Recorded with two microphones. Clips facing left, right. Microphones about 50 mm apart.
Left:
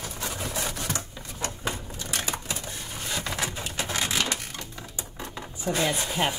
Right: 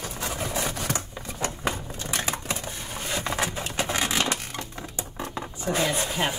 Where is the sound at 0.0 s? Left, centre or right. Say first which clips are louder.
Right 2 dB; centre.